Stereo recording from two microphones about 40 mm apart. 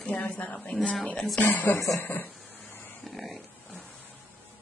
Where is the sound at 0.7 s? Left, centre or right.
Left.